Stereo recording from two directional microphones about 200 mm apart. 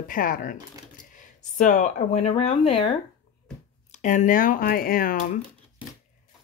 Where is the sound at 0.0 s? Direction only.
45° left (ahead or behind).